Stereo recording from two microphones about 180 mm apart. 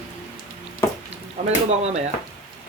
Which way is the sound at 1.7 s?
35° right (ahead or behind).